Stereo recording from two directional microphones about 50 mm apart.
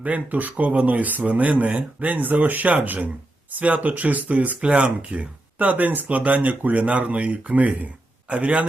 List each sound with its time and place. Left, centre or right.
0.0 s a man's voice: right